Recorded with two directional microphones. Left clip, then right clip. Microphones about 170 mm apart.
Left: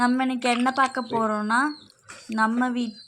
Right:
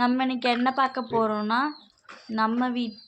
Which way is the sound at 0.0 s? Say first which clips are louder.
Left 1 dB; 15° left (ahead or behind).